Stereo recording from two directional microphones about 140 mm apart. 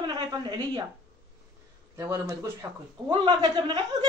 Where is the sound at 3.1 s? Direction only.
35° right (ahead or behind).